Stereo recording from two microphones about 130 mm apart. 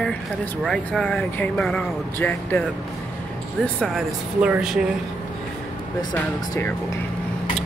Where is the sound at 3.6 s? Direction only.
5° left (ahead or behind).